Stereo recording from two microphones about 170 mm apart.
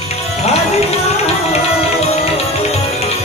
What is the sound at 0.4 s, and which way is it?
Music, 40° left (ahead or behind).